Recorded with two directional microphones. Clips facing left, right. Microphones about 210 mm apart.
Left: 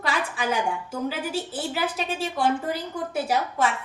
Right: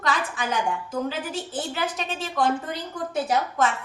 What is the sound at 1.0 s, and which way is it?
A woman's voice, 10° left (ahead or behind).